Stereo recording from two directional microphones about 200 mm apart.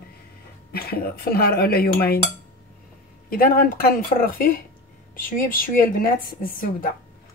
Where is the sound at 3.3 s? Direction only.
45° left (ahead or behind).